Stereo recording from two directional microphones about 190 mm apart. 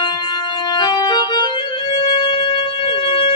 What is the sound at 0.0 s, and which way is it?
Music, 25° left (ahead or behind).